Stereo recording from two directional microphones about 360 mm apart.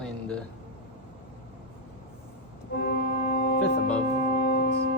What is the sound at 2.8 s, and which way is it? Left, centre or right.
Music, left.